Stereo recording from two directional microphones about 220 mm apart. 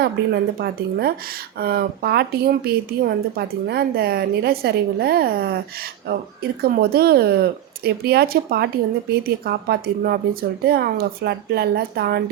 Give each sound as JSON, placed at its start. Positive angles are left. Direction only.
{"t": 0.2, "sound": "speech", "side_deg": -45}